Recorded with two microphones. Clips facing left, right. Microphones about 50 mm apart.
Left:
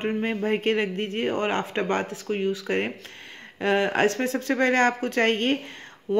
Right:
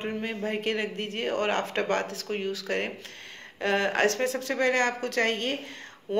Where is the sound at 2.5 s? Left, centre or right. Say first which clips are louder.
Left 4 dB; left.